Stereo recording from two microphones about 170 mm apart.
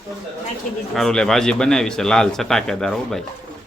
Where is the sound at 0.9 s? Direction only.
5° left (ahead or behind).